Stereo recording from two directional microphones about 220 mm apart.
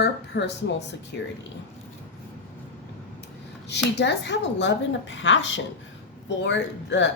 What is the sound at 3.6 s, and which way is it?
A woman's voice, 50° left (ahead or behind).